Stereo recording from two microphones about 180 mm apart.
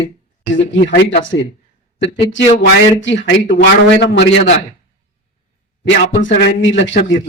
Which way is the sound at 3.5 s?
70° left (ahead or behind).